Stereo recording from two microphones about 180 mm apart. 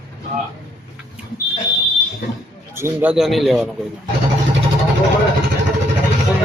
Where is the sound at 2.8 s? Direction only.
15° right (ahead or behind).